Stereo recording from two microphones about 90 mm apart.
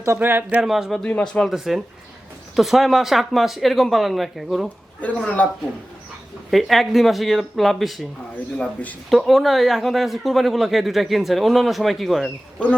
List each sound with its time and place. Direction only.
0.2 s speech: 20° right (ahead or behind)
0.6 s speech: 5° right (ahead or behind)
0.9 s speech: 10° left (ahead or behind)
4.9 s speech: 15° left (ahead or behind)
6.5 s speech: centre (ahead or behind)
8.5 s speech: 15° left (ahead or behind)
9.0 s speech: centre (ahead or behind)